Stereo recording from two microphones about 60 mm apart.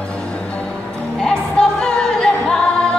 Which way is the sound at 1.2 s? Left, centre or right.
Centre.